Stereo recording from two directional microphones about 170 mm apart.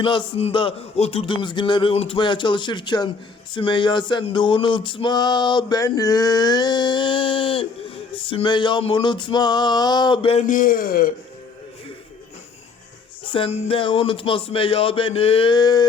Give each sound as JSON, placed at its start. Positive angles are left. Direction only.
{"t": 0.0, "sound": "a sound", "side_deg": 30}
{"t": 10.4, "sound": "a man's voice", "side_deg": 55}
{"t": 13.2, "sound": "music", "side_deg": 30}